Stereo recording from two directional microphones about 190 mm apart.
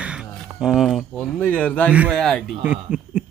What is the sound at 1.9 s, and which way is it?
Speech, 5° right (ahead or behind).